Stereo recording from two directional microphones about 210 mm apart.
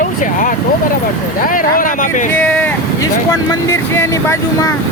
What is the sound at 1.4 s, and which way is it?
Speech, 40° left (ahead or behind).